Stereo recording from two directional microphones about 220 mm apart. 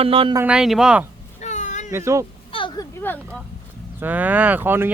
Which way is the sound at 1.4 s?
35° left (ahead or behind).